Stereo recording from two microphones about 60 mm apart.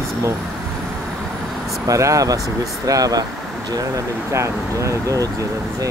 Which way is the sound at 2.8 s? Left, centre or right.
Right.